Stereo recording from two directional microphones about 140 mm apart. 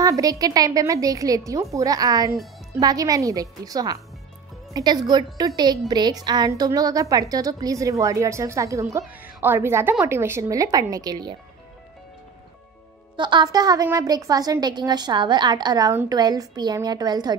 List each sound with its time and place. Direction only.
0.0 s a woman's voice: 25° right (ahead or behind)
13.1 s a woman's voice: 35° right (ahead or behind)